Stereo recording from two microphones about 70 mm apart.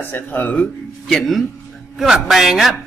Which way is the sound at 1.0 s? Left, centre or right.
Centre.